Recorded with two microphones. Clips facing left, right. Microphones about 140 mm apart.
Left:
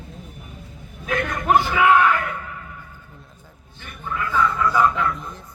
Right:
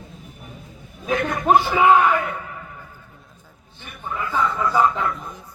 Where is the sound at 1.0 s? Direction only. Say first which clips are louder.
Right 2 dB; 20° right (ahead or behind).